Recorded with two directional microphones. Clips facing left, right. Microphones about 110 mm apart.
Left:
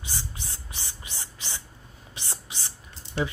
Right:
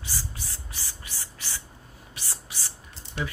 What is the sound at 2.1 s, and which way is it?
Speech, 20° left (ahead or behind).